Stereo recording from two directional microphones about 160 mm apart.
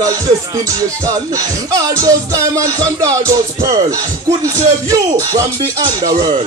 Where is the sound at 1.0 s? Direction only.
20° right (ahead or behind).